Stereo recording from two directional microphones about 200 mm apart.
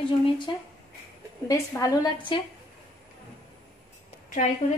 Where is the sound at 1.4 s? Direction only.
15° left (ahead or behind).